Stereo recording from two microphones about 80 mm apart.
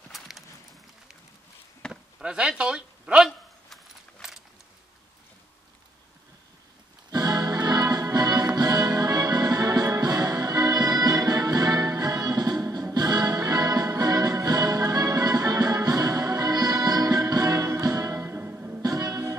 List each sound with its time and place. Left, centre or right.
1.9 s a sound: centre
3.3 s keys jangling: centre
7.1 s music: right
12.6 s music: right
12.9 s music: right
18.8 s music: right